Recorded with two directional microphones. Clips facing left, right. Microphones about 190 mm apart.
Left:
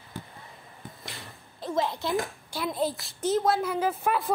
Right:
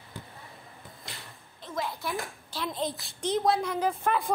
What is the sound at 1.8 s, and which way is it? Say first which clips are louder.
Speech: left 5 dB; 25° left (ahead or behind).